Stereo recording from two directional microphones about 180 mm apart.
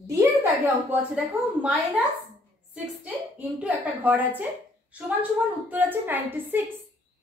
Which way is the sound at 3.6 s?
10° right (ahead or behind).